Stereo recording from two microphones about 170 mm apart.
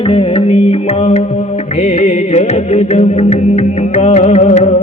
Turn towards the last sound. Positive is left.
turn(degrees=45)  # may be behind; listen again after turning